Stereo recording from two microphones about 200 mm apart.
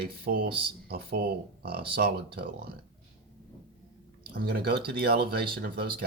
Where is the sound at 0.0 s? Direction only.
50° right (ahead or behind).